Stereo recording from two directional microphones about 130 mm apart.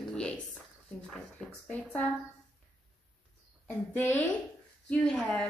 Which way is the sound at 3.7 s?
15° left (ahead or behind).